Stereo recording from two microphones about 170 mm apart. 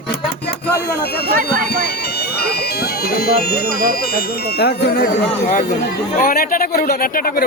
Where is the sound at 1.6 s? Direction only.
70° left (ahead or behind).